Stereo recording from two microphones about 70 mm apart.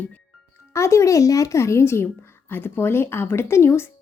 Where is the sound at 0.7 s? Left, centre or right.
Left.